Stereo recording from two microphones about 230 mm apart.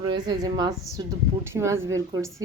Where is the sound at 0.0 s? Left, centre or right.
Centre.